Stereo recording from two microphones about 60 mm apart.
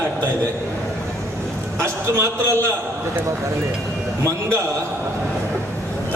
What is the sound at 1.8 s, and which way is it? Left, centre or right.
Speech, right.